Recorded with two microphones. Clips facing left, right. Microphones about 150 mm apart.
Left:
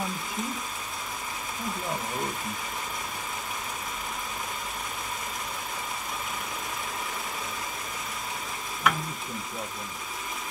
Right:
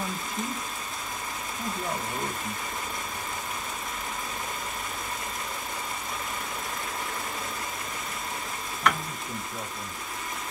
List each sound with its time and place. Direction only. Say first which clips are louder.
8.8 s stir: even; 5° left (ahead or behind)